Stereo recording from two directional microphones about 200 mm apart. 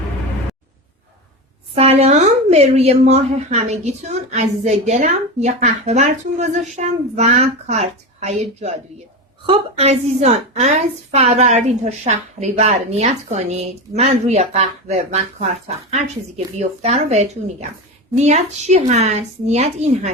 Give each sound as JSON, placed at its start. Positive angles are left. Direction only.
{"t": 1.7, "sound": "a woman's voice", "side_deg": -30}